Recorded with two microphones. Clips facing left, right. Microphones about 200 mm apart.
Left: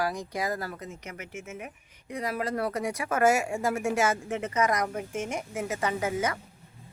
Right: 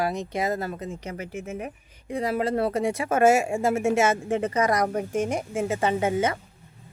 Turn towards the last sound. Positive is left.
turn(degrees=-25)  # may be behind; listen again after turning